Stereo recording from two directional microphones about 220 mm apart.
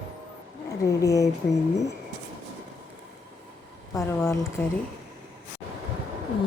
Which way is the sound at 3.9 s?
10° left (ahead or behind).